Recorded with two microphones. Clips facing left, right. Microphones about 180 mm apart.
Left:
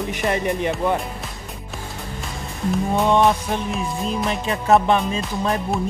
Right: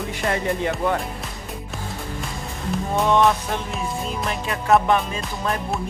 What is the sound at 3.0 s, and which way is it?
Music, 15° left (ahead or behind).